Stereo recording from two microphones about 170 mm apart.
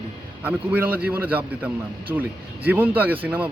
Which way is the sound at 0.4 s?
10° right (ahead or behind).